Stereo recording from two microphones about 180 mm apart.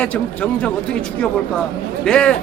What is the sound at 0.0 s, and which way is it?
Speech, 5° left (ahead or behind).